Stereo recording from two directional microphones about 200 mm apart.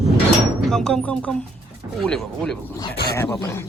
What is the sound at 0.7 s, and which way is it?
Speech, 5° left (ahead or behind).